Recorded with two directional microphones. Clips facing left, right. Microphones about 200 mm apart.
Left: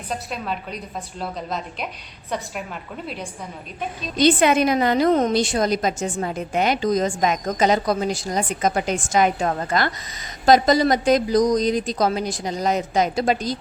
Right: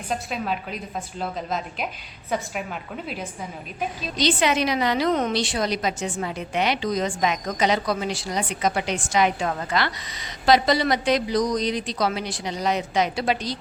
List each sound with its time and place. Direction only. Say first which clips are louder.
0.1 s a woman's voice: right 1 dB; centre (ahead or behind)
4.2 s a woman's voice: left 5 dB; 50° left (ahead or behind)